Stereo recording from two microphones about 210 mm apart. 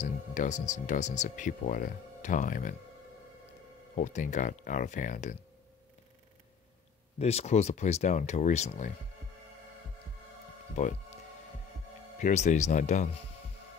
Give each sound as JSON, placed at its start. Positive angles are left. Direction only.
{"t": 0.0, "sound": "speech", "side_deg": 35}
{"t": 3.9, "sound": "speech", "side_deg": 35}
{"t": 7.2, "sound": "speech", "side_deg": 30}
{"t": 10.8, "sound": "speech", "side_deg": 35}
{"t": 12.2, "sound": "speech", "side_deg": 35}